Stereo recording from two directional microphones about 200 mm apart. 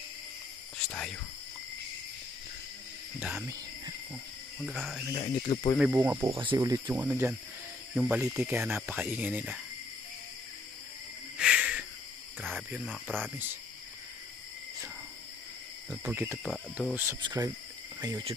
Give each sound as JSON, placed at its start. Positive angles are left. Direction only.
{"t": 0.8, "sound": "speech", "side_deg": 5}
{"t": 3.2, "sound": "speech", "side_deg": -5}
{"t": 4.6, "sound": "speech", "side_deg": 0}
{"t": 5.1, "sound": "speech", "side_deg": 25}
{"t": 5.8, "sound": "speech", "side_deg": -10}
{"t": 6.3, "sound": "speech", "side_deg": -25}
{"t": 6.6, "sound": "speech", "side_deg": -15}
{"t": 11.3, "sound": "a sound", "side_deg": -5}
{"t": 12.4, "sound": "speech", "side_deg": -10}
{"t": 12.8, "sound": "speech", "side_deg": 5}
{"t": 16.1, "sound": "speech", "side_deg": -10}
{"t": 16.4, "sound": "speech", "side_deg": 5}
{"t": 16.9, "sound": "speech", "side_deg": -10}